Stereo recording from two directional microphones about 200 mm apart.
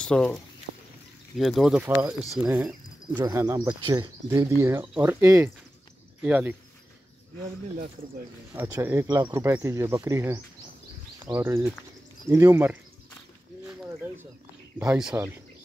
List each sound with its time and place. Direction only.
0.0 s speech: 5° left (ahead or behind)
3.2 s speech: 15° right (ahead or behind)
8.5 s speech: 15° right (ahead or behind)
14.8 s speech: 5° right (ahead or behind)